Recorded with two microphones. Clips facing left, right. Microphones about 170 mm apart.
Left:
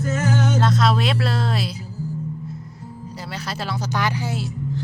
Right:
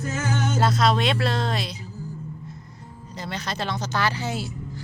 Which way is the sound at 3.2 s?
5° left (ahead or behind).